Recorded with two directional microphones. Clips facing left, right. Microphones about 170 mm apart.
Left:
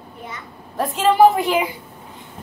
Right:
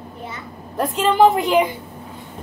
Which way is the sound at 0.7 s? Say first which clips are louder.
Left 1 dB; centre (ahead or behind).